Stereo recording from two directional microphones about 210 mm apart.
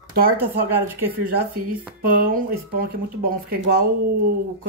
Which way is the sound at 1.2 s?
45° right (ahead or behind).